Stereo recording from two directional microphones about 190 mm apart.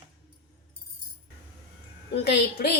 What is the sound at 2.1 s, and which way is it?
Speech, 60° left (ahead or behind).